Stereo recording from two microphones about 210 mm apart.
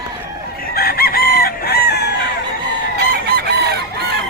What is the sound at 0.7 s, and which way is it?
Chicken, 45° left (ahead or behind).